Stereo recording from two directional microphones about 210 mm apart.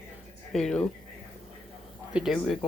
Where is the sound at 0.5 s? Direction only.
5° left (ahead or behind).